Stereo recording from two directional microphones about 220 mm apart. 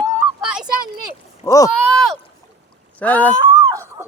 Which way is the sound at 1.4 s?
15° left (ahead or behind).